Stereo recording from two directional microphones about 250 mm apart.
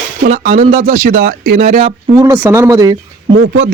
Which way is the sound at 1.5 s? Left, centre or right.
Right.